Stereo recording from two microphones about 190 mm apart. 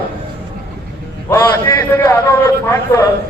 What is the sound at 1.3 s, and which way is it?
A man's voice, 15° left (ahead or behind).